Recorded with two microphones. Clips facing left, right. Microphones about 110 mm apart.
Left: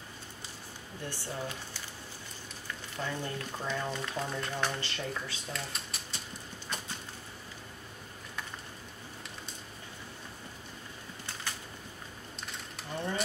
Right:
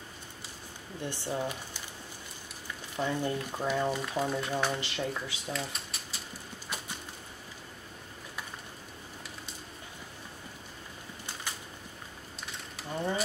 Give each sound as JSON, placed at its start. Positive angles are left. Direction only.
{"t": 1.1, "sound": "speech", "side_deg": -15}
{"t": 3.0, "sound": "speech", "side_deg": -15}
{"t": 5.5, "sound": "typewriter", "side_deg": 0}
{"t": 12.9, "sound": "bird", "side_deg": -5}